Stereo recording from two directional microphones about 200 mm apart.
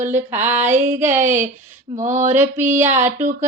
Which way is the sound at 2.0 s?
35° right (ahead or behind).